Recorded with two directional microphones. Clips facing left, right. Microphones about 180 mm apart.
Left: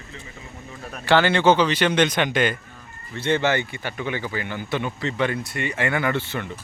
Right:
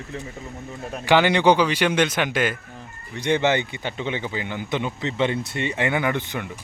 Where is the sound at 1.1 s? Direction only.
15° right (ahead or behind).